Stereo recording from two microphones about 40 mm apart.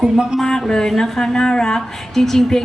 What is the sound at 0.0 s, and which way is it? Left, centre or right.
Speech, centre.